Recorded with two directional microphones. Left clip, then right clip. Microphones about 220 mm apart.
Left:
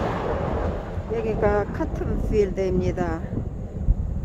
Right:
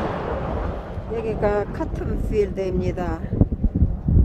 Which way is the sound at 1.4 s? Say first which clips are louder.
Right 1 dB; centre (ahead or behind).